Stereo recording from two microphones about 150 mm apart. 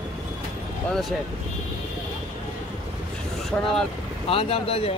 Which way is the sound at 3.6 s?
5° left (ahead or behind).